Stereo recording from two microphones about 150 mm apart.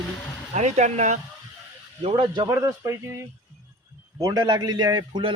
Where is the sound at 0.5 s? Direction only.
50° right (ahead or behind).